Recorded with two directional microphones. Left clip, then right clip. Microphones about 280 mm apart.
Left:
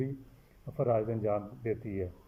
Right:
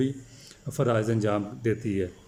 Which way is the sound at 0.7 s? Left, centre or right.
Centre.